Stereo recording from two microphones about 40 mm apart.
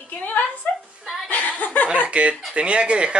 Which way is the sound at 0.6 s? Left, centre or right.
Left.